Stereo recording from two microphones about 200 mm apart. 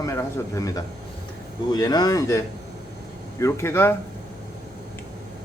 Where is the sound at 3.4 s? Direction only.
15° left (ahead or behind).